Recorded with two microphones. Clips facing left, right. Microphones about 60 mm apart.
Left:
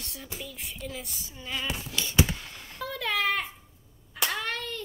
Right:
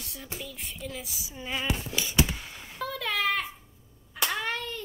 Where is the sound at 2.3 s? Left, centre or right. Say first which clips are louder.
Left 1 dB; centre.